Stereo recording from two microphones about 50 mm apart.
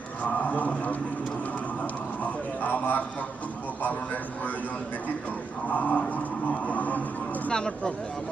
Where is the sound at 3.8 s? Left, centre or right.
Left.